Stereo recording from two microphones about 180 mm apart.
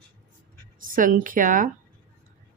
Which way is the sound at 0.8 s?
50° right (ahead or behind).